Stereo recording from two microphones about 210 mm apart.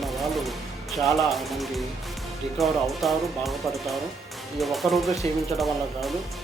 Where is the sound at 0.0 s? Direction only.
Centre (ahead or behind).